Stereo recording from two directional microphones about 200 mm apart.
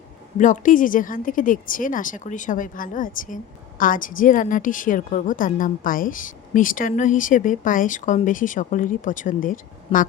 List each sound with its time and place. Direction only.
0.3 s speech: 40° left (ahead or behind)